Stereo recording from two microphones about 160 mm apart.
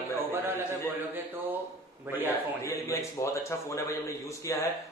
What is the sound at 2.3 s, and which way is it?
Speech, 20° left (ahead or behind).